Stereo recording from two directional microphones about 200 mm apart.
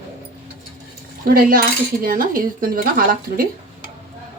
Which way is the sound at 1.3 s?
45° right (ahead or behind).